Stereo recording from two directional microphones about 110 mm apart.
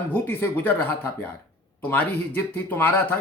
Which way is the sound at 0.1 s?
20° left (ahead or behind).